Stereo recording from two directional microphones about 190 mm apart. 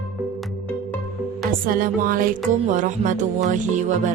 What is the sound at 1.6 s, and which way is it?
Music, 45° right (ahead or behind).